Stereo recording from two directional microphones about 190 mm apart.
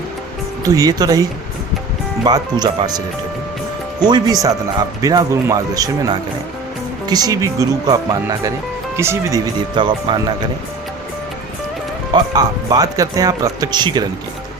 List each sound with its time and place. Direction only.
0.6 s speech: 20° right (ahead or behind)
4.0 s speech: 20° right (ahead or behind)
9.7 s speech: 25° right (ahead or behind)
12.1 s speech: 20° right (ahead or behind)